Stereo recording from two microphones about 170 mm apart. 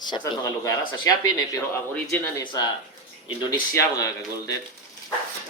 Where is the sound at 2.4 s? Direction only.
25° left (ahead or behind).